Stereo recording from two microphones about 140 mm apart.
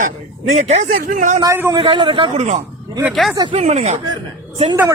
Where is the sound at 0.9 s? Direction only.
70° right (ahead or behind).